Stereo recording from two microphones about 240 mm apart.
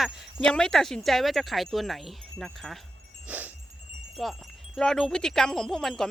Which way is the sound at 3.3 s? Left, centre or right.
Centre.